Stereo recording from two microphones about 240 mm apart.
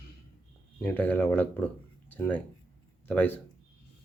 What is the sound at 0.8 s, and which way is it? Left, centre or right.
Speech, centre.